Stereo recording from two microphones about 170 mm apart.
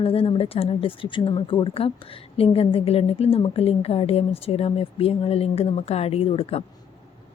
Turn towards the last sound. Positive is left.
turn(degrees=35)  # may be behind; listen again after turning